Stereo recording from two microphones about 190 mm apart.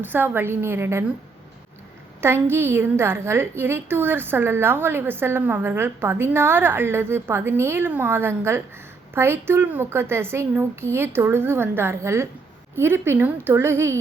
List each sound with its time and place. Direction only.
0.0 s a woman's voice: 10° right (ahead or behind)
2.2 s a woman's voice: 10° right (ahead or behind)